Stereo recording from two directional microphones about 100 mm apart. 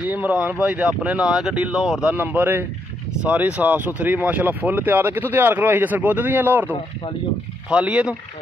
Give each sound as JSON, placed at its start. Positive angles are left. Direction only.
{"t": 0.0, "sound": "speech", "side_deg": -15}
{"t": 2.1, "sound": "speech", "side_deg": -15}
{"t": 7.7, "sound": "speech", "side_deg": -10}